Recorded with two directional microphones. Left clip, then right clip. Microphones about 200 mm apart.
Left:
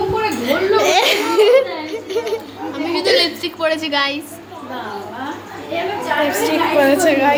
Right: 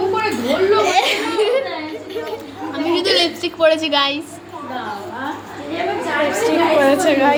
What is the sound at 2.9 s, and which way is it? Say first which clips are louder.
A woman's voice: left 1 dB; 10° right (ahead or behind).